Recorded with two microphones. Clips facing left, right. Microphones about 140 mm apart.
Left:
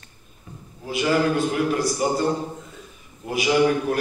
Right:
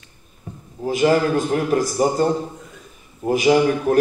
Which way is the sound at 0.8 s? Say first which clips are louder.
Right 4 dB; 40° right (ahead or behind).